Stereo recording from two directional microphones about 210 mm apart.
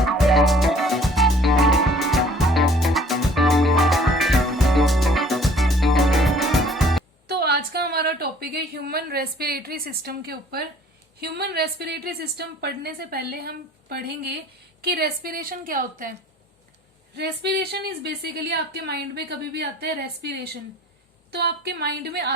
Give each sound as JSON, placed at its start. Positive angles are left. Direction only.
{"t": 0.0, "sound": "music", "side_deg": 0}
{"t": 7.3, "sound": "a sound", "side_deg": -50}
{"t": 11.2, "sound": "a woman's voice", "side_deg": -50}
{"t": 17.2, "sound": "a woman's voice", "side_deg": -50}